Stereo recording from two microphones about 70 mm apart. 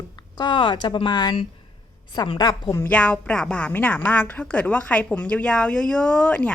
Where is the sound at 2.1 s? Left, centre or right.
Left.